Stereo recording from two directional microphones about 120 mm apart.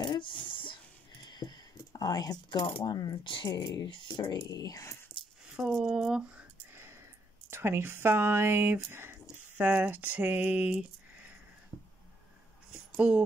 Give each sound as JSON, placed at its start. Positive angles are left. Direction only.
{"t": 0.0, "sound": "a sound", "side_deg": 40}
{"t": 1.2, "sound": "speech", "side_deg": 35}
{"t": 3.8, "sound": "speech", "side_deg": 45}
{"t": 5.4, "sound": "speech", "side_deg": 0}
{"t": 6.7, "sound": "a sound", "side_deg": -20}
{"t": 9.6, "sound": "speech", "side_deg": -15}
{"t": 12.9, "sound": "speech", "side_deg": -10}